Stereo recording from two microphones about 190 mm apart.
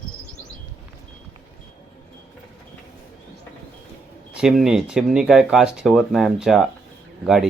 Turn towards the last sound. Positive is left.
turn(degrees=0)  # may be behind; listen again after turning